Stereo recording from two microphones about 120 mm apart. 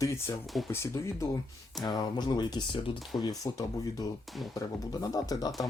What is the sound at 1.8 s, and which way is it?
Speech, 35° left (ahead or behind).